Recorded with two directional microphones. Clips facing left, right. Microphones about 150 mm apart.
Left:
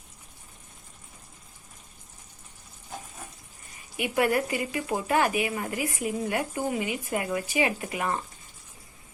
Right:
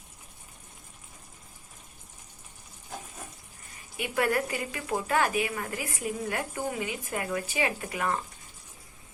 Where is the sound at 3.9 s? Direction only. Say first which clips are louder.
Left 3 dB; 15° left (ahead or behind).